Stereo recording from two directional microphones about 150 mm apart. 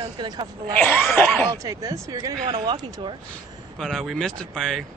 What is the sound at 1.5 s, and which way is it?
Speech, 20° right (ahead or behind).